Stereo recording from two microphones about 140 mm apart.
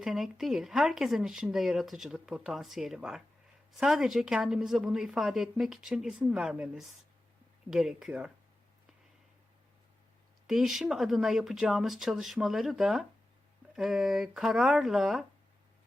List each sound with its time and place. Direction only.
0.0 s speech: centre (ahead or behind)
10.4 s speech: 5° right (ahead or behind)